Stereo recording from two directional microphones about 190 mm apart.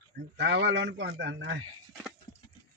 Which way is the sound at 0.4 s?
70° right (ahead or behind).